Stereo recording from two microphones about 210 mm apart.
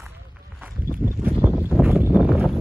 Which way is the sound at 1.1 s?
10° right (ahead or behind).